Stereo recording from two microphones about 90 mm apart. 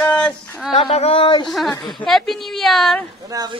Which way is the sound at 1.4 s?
Centre (ahead or behind).